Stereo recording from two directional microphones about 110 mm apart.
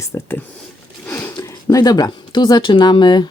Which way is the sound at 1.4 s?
35° left (ahead or behind).